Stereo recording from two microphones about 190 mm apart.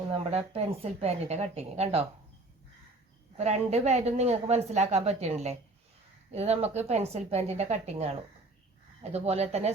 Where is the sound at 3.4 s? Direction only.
35° right (ahead or behind).